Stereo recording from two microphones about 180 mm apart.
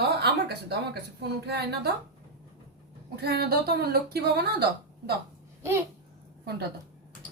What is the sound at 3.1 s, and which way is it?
A woman's voice, 60° right (ahead or behind).